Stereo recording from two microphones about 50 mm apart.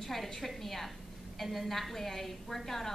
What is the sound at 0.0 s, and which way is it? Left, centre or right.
A woman's voice, centre.